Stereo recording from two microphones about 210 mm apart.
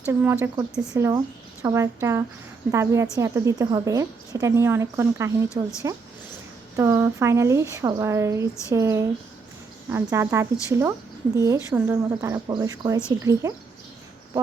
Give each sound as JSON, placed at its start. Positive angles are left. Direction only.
{"t": 0.1, "sound": "a woman's voice", "side_deg": -10}
{"t": 6.7, "sound": "a woman's voice", "side_deg": -15}